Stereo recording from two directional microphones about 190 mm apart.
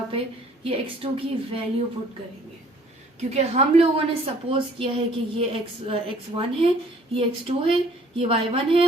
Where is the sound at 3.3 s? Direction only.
30° right (ahead or behind).